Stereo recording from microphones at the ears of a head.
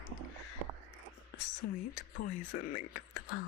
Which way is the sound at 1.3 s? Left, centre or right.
Left.